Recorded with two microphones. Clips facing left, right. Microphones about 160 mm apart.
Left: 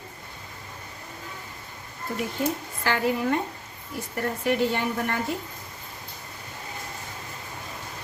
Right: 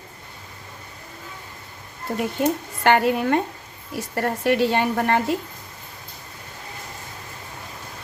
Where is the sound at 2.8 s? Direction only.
70° right (ahead or behind).